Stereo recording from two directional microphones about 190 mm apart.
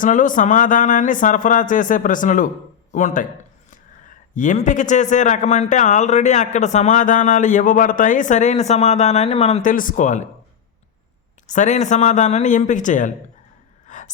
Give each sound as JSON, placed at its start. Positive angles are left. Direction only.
{"t": 0.0, "sound": "speech", "side_deg": 45}
{"t": 4.4, "sound": "a man's voice", "side_deg": 40}
{"t": 11.4, "sound": "a man's voice", "side_deg": 40}
{"t": 13.8, "sound": "a sound", "side_deg": 40}